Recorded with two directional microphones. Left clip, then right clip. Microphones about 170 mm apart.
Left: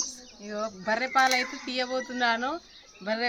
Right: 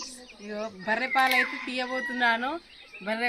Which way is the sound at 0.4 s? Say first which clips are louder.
Left 2 dB; 10° left (ahead or behind).